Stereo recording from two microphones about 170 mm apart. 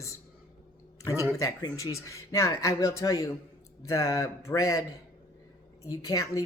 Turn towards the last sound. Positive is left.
turn(degrees=20)  # may be behind; listen again after turning